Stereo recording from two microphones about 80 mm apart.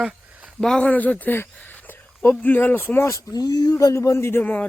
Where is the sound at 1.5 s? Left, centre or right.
Left.